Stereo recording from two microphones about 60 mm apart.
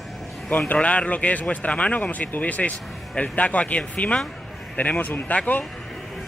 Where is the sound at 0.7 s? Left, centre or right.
Left.